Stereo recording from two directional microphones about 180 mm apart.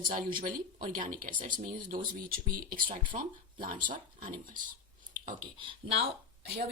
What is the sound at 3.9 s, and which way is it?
Speech, 25° right (ahead or behind).